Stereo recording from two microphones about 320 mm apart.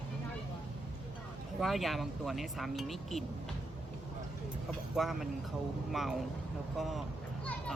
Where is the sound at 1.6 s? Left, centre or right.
Centre.